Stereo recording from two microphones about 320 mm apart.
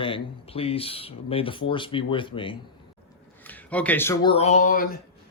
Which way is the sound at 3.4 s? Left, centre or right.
Centre.